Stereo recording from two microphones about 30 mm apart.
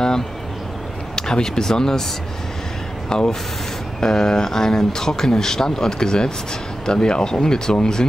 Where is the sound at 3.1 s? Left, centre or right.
Left.